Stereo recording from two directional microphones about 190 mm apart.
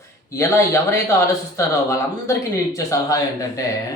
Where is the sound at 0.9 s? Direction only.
15° left (ahead or behind).